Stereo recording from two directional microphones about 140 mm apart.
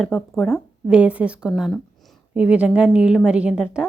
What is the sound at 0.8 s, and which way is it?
Speech, 5° right (ahead or behind).